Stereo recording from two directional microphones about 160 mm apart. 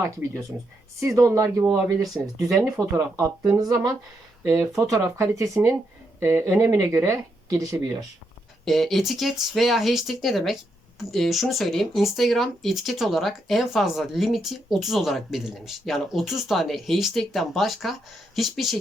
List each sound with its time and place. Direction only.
0.0 s speech: 15° right (ahead or behind)
8.6 s speech: centre (ahead or behind)